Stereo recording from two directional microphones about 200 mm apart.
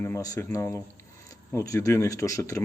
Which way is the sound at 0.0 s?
15° left (ahead or behind).